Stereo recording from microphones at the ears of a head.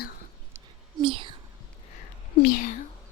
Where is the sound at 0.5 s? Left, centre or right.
Right.